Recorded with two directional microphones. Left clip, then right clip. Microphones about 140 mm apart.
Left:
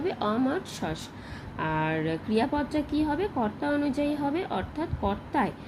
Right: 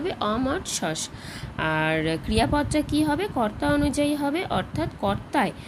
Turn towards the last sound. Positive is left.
turn(degrees=-25)  # may be behind; listen again after turning